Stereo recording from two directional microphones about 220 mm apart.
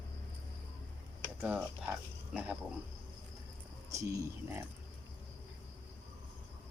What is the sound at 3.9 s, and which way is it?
Speech, 15° right (ahead or behind).